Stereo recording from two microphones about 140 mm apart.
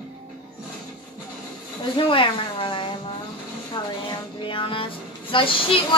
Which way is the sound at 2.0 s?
35° left (ahead or behind).